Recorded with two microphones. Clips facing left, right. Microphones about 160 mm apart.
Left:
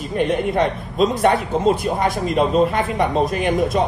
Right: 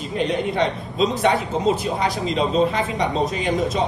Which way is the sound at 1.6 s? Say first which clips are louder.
Left 3 dB; 50° left (ahead or behind).